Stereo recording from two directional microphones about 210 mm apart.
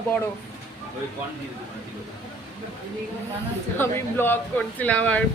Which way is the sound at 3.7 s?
10° left (ahead or behind).